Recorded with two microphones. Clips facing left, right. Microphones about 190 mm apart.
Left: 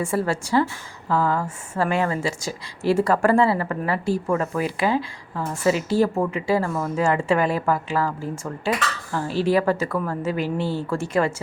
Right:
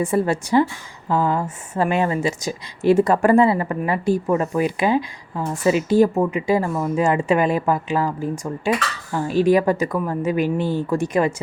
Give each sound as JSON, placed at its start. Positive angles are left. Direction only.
{"t": 0.0, "sound": "speech", "side_deg": -20}